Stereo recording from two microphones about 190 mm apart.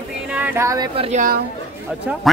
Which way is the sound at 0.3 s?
10° right (ahead or behind).